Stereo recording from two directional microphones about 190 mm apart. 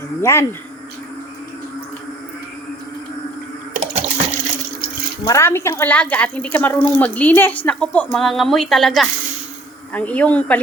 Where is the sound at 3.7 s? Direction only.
35° right (ahead or behind).